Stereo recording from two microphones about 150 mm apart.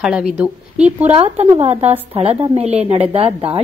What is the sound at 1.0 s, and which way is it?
Speech, 40° right (ahead or behind).